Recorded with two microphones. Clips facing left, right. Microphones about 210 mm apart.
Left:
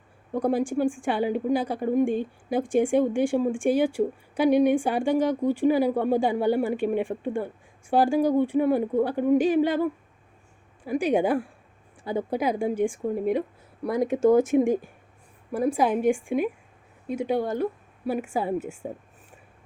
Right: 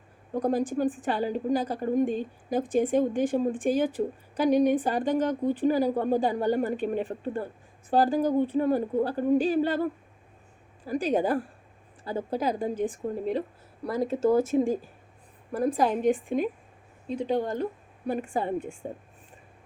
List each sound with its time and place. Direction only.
0.4 s a woman's voice: 10° left (ahead or behind)